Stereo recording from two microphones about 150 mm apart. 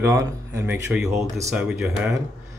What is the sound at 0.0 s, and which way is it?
Speech, 20° right (ahead or behind).